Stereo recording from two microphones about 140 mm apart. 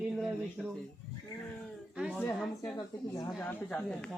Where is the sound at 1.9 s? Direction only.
5° right (ahead or behind).